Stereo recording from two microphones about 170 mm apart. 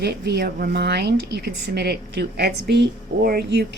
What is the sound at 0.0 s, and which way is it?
A woman's voice, 75° right (ahead or behind).